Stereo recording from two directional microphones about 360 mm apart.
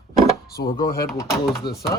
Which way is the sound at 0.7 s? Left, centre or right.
Left.